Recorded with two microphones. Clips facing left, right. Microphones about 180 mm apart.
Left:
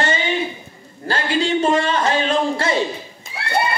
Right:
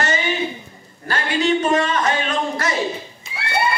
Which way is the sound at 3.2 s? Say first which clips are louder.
Left 2 dB; 50° left (ahead or behind).